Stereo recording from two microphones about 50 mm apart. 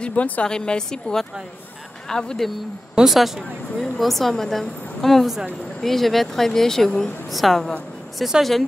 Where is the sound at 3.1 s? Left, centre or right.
Centre.